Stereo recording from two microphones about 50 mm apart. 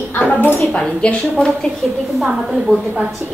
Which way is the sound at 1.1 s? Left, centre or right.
Centre.